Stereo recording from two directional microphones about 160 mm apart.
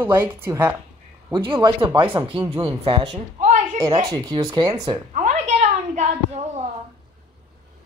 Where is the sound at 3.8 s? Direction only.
25° right (ahead or behind).